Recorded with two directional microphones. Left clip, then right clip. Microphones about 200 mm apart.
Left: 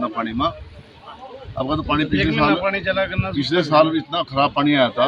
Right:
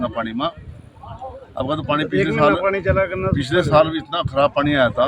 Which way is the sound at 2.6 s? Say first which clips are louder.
Right 2 dB; 60° right (ahead or behind).